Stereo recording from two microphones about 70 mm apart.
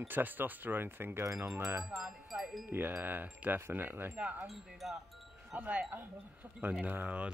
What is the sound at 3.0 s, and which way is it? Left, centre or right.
Speech, right.